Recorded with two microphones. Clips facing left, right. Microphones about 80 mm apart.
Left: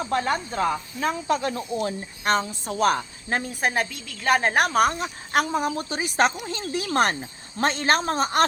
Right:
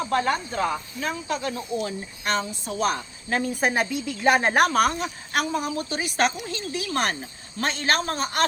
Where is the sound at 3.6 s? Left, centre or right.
Centre.